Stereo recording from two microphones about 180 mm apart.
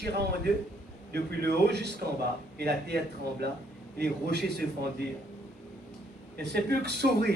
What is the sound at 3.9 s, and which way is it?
Speech, 65° right (ahead or behind).